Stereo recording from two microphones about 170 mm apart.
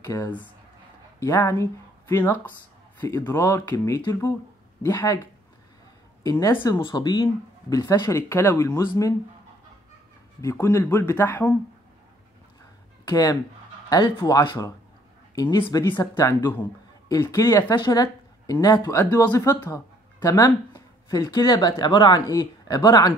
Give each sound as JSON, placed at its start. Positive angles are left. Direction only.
{"t": 0.0, "sound": "speech", "side_deg": 20}
{"t": 6.3, "sound": "speech", "side_deg": 15}
{"t": 10.4, "sound": "speech", "side_deg": 15}
{"t": 13.0, "sound": "speech", "side_deg": 20}